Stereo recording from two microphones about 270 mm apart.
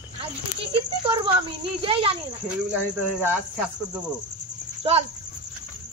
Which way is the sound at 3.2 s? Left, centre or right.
Centre.